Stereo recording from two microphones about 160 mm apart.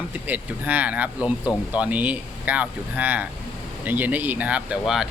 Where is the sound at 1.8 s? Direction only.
10° right (ahead or behind).